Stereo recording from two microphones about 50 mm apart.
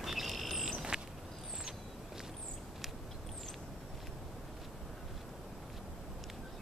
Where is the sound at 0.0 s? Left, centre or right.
Centre.